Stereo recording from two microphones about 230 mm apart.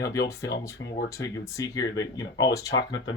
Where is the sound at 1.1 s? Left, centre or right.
Centre.